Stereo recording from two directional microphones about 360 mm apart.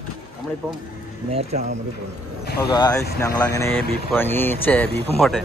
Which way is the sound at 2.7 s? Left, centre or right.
Centre.